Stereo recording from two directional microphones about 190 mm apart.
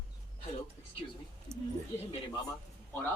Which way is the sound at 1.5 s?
35° right (ahead or behind).